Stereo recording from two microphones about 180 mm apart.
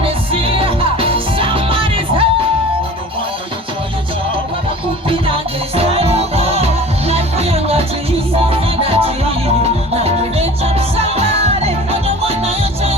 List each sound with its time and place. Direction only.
0.0 s music: 30° right (ahead or behind)
5.0 s music: 30° right (ahead or behind)